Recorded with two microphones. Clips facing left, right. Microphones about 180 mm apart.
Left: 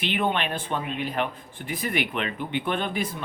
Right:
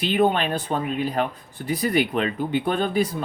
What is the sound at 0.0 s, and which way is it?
Speech, 35° right (ahead or behind).